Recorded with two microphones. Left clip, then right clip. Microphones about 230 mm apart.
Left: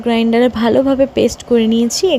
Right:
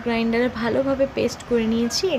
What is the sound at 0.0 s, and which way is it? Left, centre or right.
Speech, left.